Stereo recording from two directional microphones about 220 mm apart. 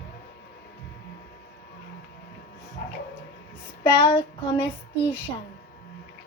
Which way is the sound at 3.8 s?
20° left (ahead or behind).